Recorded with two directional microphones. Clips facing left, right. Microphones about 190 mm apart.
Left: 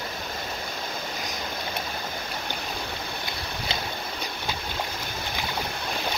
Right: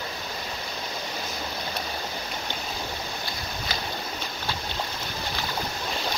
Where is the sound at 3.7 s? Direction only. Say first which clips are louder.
Left 2 dB; 25° left (ahead or behind).